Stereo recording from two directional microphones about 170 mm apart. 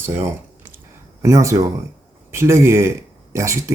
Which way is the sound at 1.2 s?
20° right (ahead or behind).